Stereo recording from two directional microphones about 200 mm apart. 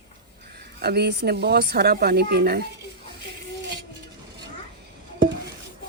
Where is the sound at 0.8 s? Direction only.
55° right (ahead or behind).